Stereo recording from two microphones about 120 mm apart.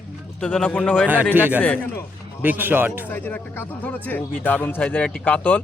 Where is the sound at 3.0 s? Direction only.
15° left (ahead or behind).